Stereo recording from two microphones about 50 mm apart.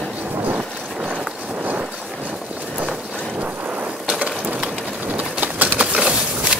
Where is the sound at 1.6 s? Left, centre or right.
Right.